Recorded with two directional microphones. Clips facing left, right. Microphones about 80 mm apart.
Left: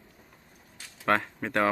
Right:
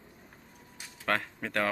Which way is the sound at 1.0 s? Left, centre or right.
Centre.